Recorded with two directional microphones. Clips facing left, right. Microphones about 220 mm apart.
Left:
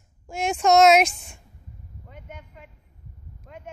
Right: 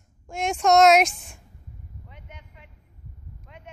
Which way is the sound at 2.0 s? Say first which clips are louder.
Left 9 dB; 50° left (ahead or behind).